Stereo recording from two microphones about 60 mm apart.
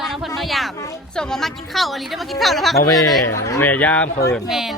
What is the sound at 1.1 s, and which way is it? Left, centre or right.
A woman's voice, centre.